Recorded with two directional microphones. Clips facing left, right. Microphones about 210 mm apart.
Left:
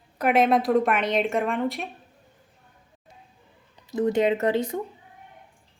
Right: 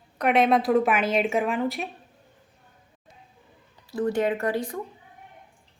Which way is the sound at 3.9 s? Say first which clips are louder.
Left 3 dB; 20° left (ahead or behind).